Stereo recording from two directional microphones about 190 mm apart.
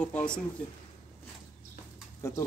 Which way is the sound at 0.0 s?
5° left (ahead or behind).